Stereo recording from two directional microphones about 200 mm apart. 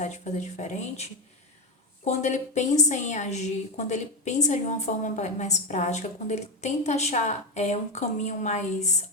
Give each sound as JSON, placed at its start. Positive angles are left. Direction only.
{"t": 0.0, "sound": "a woman's voice", "side_deg": 35}